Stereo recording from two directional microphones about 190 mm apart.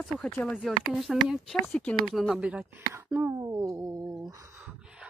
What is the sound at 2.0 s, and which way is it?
Music, centre (ahead or behind).